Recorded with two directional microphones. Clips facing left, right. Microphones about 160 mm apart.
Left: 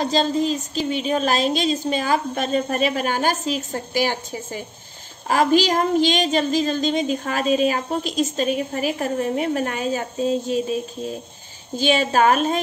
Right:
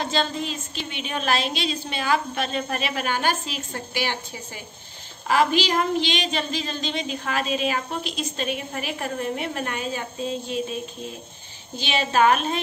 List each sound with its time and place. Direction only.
0.0 s a woman's voice: 40° left (ahead or behind)
11.7 s a woman's voice: 45° left (ahead or behind)